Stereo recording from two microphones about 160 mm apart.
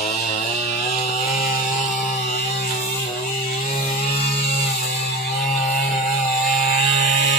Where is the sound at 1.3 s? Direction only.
65° left (ahead or behind).